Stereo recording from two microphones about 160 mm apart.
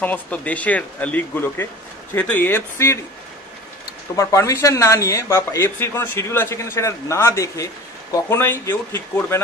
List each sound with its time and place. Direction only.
0.0 s speech: 10° left (ahead or behind)
4.1 s speech: 20° left (ahead or behind)